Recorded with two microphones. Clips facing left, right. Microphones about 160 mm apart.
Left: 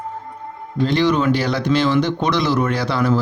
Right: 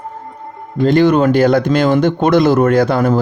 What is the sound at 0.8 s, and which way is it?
Speech, 50° right (ahead or behind).